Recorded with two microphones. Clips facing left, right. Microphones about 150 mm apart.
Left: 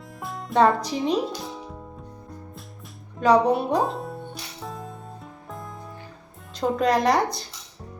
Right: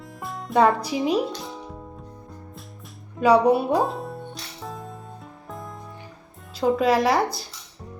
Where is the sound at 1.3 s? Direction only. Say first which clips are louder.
Even; centre (ahead or behind).